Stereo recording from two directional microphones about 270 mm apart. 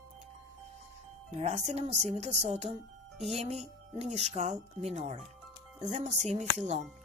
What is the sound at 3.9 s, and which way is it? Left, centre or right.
Speech, right.